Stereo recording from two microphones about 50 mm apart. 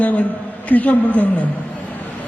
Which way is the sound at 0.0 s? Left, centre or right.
Left.